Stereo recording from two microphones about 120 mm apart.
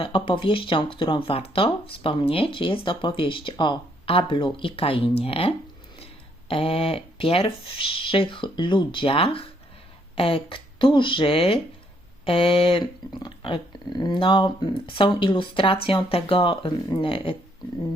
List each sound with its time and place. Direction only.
0.0 s speech: 45° left (ahead or behind)